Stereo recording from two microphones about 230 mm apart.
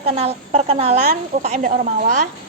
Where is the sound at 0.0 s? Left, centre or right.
Right.